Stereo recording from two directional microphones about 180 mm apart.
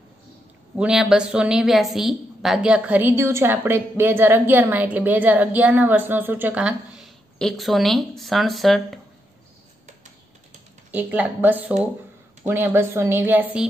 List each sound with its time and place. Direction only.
0.7 s a woman's voice: 5° right (ahead or behind)
10.9 s a woman's voice: 10° right (ahead or behind)